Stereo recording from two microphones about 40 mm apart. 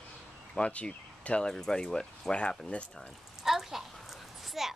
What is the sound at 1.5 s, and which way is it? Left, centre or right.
Speech, centre.